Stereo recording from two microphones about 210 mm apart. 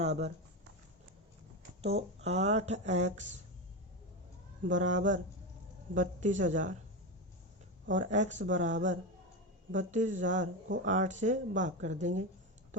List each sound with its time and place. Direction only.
0.0 s speech: 30° right (ahead or behind)
1.8 s speech: 30° right (ahead or behind)
4.6 s speech: 35° right (ahead or behind)
7.9 s speech: 35° right (ahead or behind)